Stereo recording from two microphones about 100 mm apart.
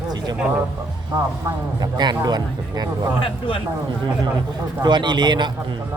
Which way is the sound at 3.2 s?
60° left (ahead or behind).